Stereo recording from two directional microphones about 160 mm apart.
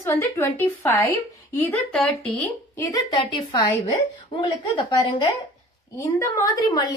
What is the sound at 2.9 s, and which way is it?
A woman's voice, 30° left (ahead or behind).